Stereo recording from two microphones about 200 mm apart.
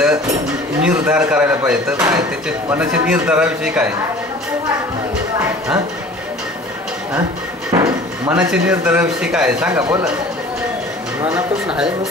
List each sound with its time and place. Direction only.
0.8 s a man's voice: 5° right (ahead or behind)
7.7 s drawer open or close: 15° right (ahead or behind)
8.3 s a man's voice: 5° right (ahead or behind)
9.7 s speech: 15° right (ahead or behind)
11.3 s a man's voice: 5° right (ahead or behind)